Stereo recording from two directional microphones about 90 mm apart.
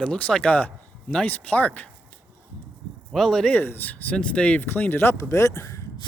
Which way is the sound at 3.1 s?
5° left (ahead or behind).